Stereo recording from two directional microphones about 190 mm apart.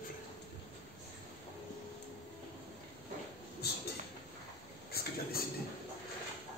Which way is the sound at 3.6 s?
55° left (ahead or behind).